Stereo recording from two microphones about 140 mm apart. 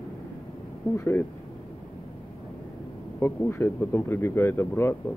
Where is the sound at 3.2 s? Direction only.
15° left (ahead or behind).